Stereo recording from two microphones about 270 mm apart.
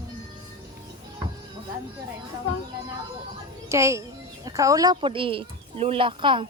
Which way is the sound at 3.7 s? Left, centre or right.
Centre.